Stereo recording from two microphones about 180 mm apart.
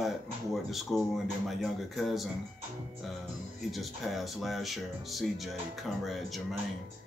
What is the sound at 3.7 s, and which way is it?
Speech, centre (ahead or behind).